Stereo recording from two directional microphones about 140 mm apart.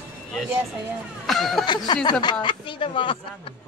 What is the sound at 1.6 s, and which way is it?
Speech, 30° left (ahead or behind).